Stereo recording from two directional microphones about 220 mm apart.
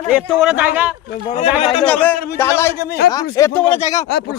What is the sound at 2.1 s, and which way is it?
Speech, 45° left (ahead or behind).